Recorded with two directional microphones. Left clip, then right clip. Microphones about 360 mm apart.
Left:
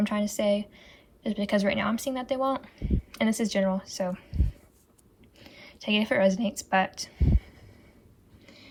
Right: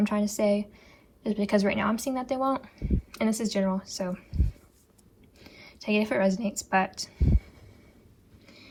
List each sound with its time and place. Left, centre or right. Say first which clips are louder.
0.0 s speech: right 1 dB; centre
5.4 s speech: left 1 dB; centre
8.4 s a sound: even; centre